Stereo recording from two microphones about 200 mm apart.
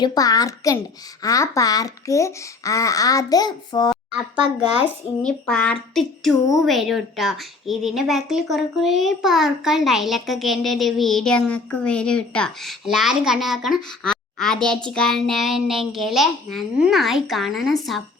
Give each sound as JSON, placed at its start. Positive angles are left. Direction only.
{"t": 0.0, "sound": "a child's voice", "side_deg": 20}
{"t": 4.4, "sound": "speech", "side_deg": -25}
{"t": 5.2, "sound": "a woman's voice", "side_deg": 5}